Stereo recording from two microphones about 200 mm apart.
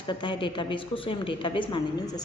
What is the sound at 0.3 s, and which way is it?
A woman's voice, 25° left (ahead or behind).